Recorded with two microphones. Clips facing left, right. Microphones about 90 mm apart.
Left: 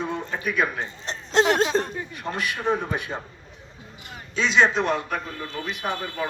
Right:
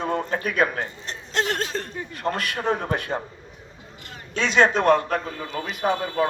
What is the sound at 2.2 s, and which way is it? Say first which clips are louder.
Speech: right 3 dB; 55° right (ahead or behind).